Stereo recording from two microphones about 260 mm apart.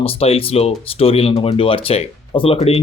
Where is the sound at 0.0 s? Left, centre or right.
Left.